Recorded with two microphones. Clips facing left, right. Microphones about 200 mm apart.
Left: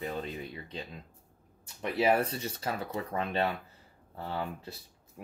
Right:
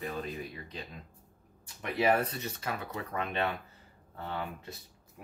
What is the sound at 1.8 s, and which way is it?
Speech, 30° left (ahead or behind).